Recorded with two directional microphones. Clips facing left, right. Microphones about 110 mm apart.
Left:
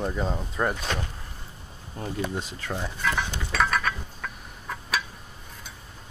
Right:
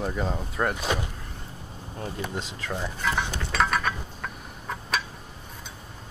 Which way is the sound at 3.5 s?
5° right (ahead or behind).